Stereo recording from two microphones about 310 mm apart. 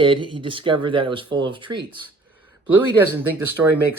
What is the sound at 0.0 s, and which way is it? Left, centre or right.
Speech, centre.